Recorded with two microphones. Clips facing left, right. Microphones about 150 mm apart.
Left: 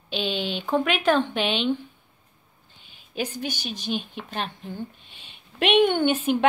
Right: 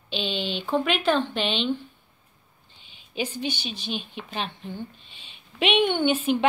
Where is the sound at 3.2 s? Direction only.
45° left (ahead or behind).